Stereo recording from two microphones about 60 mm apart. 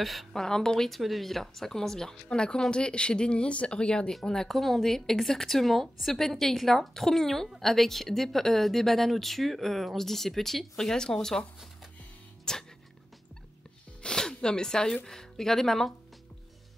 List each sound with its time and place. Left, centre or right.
0.0 s speech: centre
12.5 s speech: centre
14.0 s a sound: centre
15.0 s speech: centre